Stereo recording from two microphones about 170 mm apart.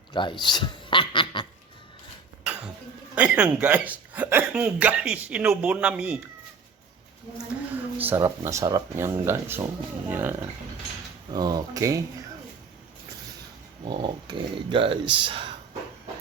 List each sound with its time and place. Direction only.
0.1 s speech: 30° left (ahead or behind)
0.4 s dog: 25° left (ahead or behind)
3.2 s speech: 5° right (ahead or behind)
7.9 s speech: 10° right (ahead or behind)
11.3 s speech: 25° right (ahead or behind)
13.8 s speech: 25° right (ahead or behind)